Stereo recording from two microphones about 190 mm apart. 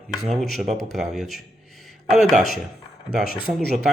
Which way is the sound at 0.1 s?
Centre (ahead or behind).